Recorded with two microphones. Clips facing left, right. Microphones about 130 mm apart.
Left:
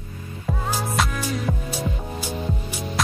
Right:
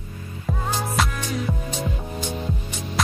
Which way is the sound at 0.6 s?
5° left (ahead or behind).